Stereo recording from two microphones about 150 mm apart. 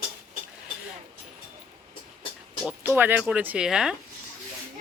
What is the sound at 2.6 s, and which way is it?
Speech, 15° right (ahead or behind).